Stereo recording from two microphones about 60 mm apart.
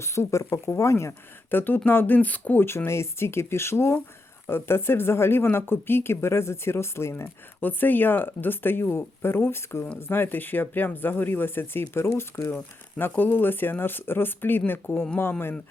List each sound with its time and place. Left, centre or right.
0.0 s speech: left
1.5 s speech: left
2.6 s speech: left
7.6 s speech: left
13.0 s speech: left